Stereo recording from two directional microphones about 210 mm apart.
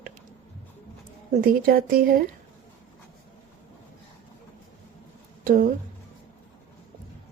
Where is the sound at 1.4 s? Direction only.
45° right (ahead or behind).